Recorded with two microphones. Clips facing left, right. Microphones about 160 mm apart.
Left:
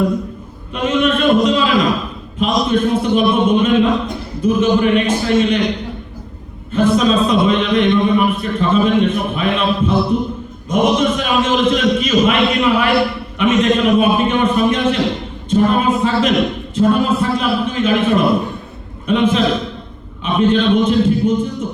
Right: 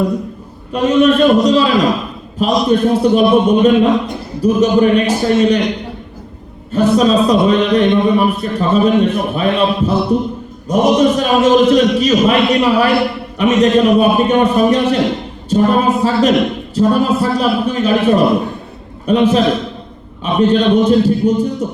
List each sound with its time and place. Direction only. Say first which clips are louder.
0.7 s a man's voice: right 5 dB; 40° right (ahead or behind)
6.7 s a man's voice: right 2 dB; 40° right (ahead or behind)